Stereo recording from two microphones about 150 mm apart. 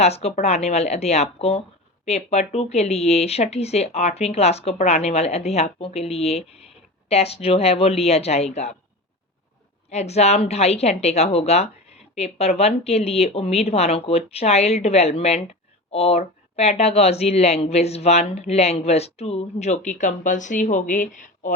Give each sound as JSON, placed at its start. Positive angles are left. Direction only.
{"t": 0.0, "sound": "speech", "side_deg": 45}
{"t": 9.9, "sound": "speech", "side_deg": 45}